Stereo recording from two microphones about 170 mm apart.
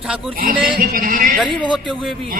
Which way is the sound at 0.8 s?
55° right (ahead or behind).